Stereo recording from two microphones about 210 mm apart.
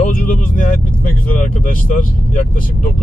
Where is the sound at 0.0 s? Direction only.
40° left (ahead or behind).